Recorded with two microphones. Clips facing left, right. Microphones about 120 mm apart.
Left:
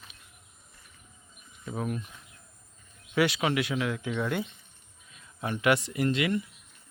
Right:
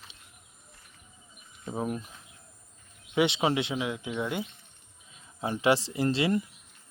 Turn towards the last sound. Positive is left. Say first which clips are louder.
# right 1 dB
turn(degrees=-30)  # may be behind; listen again after turning